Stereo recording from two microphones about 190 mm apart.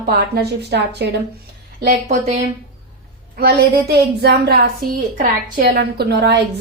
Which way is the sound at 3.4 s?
60° right (ahead or behind).